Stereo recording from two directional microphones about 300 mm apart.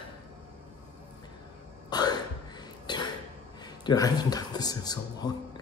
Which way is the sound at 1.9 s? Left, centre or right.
Centre.